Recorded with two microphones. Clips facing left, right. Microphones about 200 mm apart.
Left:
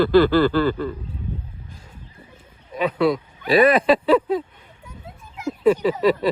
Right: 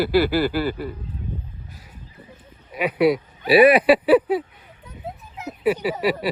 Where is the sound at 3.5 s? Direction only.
10° right (ahead or behind).